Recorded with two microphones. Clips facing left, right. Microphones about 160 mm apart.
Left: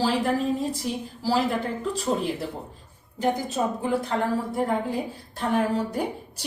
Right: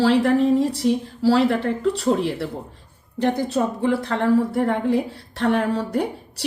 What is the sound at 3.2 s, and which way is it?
A woman's voice, 70° right (ahead or behind).